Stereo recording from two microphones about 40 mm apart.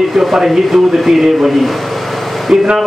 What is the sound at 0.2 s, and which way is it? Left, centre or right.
A man's voice, centre.